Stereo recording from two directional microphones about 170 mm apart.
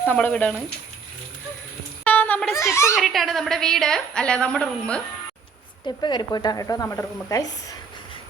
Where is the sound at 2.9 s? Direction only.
Centre (ahead or behind).